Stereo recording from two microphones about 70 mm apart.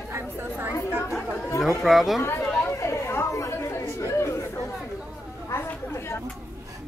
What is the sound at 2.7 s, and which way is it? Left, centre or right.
Chatter, left.